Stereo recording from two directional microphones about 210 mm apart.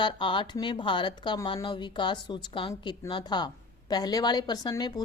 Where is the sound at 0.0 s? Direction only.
25° left (ahead or behind).